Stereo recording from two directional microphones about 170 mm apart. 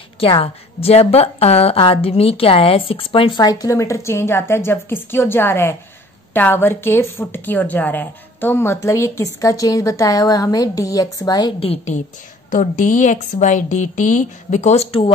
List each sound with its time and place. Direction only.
0.2 s a woman's voice: 35° left (ahead or behind)